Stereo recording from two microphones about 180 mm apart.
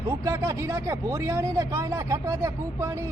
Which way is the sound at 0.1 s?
15° right (ahead or behind).